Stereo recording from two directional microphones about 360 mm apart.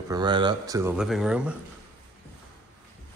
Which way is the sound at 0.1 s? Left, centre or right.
Centre.